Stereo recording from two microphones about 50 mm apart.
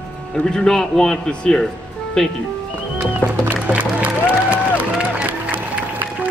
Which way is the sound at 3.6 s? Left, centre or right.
Right.